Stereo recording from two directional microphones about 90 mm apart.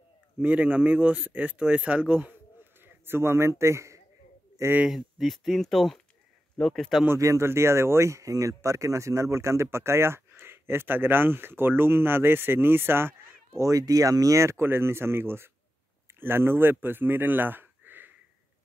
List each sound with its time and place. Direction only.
0.4 s speech: 15° right (ahead or behind); by 4.0 s 35° right (ahead or behind)
4.8 s speech: centre (ahead or behind)
7.2 s speech: 35° right (ahead or behind)
13.5 s speech: 40° right (ahead or behind); by 18.1 s 20° right (ahead or behind)